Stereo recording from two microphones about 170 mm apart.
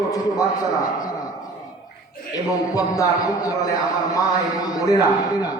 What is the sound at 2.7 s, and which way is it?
A man's voice, 20° left (ahead or behind).